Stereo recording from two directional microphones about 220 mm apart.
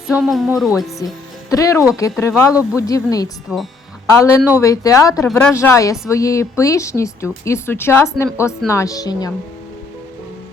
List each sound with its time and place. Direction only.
0.2 s speech: centre (ahead or behind)
1.0 s speech: 15° left (ahead or behind)
3.5 s speech: 5° right (ahead or behind)
4.1 s speech: 15° left (ahead or behind)